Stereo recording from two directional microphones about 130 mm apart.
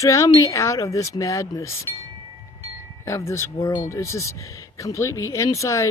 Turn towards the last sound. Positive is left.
turn(degrees=25)  # may be behind; listen again after turning